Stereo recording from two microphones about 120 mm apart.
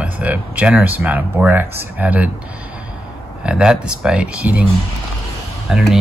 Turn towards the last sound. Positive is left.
turn(degrees=-5)  # may be behind; listen again after turning